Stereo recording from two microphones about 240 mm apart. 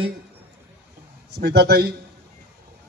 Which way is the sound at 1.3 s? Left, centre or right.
Right.